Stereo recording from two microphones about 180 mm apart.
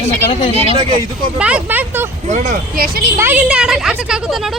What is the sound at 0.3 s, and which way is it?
Speech, 30° left (ahead or behind).